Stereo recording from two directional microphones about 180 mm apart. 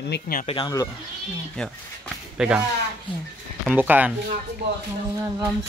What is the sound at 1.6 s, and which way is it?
Speech, centre (ahead or behind).